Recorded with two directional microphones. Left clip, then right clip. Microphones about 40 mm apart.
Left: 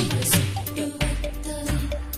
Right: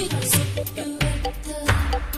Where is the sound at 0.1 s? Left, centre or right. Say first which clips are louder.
Even; right.